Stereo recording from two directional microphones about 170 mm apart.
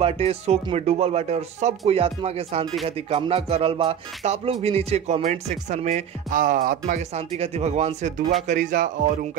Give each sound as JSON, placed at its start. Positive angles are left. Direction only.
{"t": 0.0, "sound": "speech", "side_deg": -35}
{"t": 7.2, "sound": "speech", "side_deg": -40}